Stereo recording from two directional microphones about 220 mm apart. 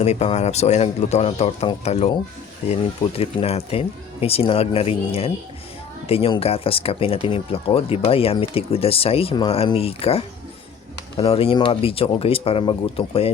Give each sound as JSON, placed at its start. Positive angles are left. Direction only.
{"t": 0.0, "sound": "speech", "side_deg": 30}